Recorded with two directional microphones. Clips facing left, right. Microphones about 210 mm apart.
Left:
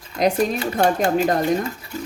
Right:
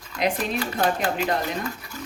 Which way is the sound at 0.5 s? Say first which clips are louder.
Left 5 dB; 25° left (ahead or behind).